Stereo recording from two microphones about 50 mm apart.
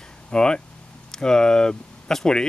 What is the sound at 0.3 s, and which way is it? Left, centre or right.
Speech, centre.